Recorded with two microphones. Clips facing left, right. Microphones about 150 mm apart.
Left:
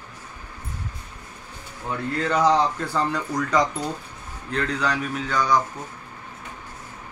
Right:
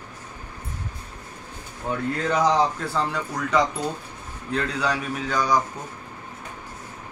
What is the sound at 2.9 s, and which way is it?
Speech, 5° right (ahead or behind).